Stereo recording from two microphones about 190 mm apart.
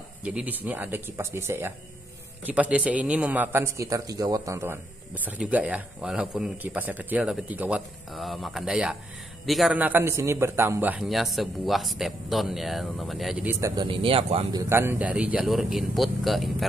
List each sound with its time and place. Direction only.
0.2 s a man's voice: 5° right (ahead or behind)
13.6 s speech: 20° right (ahead or behind)
14.6 s a man's voice: 15° right (ahead or behind)